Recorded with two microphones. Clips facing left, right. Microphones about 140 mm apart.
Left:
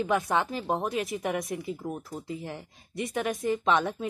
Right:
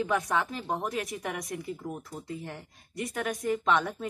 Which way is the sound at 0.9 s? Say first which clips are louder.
Left 4 dB; centre (ahead or behind).